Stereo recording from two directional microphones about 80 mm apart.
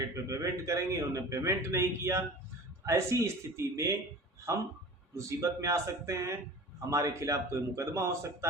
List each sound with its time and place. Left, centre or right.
0.3 s a man's voice: right
5.1 s a man's voice: right